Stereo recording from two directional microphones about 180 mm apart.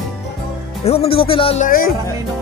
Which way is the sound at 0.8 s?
35° left (ahead or behind).